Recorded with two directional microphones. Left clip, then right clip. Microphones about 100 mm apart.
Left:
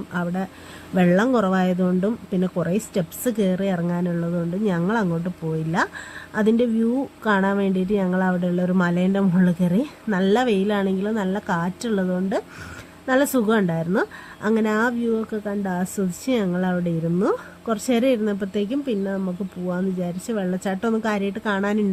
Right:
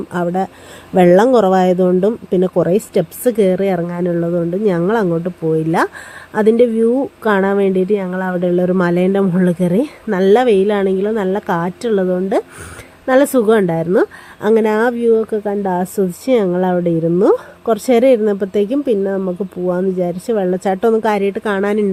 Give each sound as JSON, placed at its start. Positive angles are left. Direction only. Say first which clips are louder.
{"t": 0.1, "sound": "a woman's voice", "louder": "right 10 dB", "side_deg": -25}
{"t": 6.3, "sound": "a woman's voice", "louder": "right 9 dB", "side_deg": -25}
{"t": 19.1, "sound": "speech", "louder": "right 9 dB", "side_deg": -5}
{"t": 19.7, "sound": "a woman's voice", "louder": "right 10 dB", "side_deg": -20}